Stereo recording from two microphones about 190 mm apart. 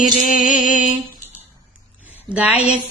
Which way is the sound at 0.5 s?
40° left (ahead or behind).